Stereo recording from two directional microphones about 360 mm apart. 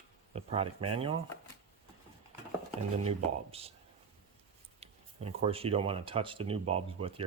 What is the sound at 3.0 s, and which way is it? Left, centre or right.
Speech, centre.